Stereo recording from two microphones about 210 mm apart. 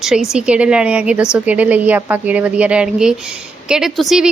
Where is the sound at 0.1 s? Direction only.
5° right (ahead or behind).